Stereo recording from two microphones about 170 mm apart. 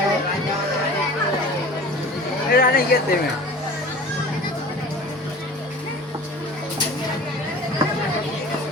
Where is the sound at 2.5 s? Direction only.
60° left (ahead or behind).